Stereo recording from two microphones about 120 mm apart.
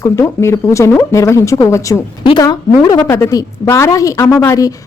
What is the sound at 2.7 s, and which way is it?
Speech, 40° left (ahead or behind).